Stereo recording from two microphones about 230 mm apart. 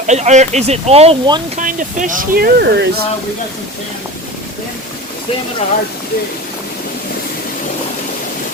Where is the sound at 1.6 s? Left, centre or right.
Right.